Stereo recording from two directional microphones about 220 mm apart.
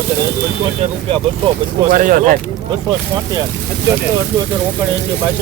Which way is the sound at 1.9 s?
35° right (ahead or behind).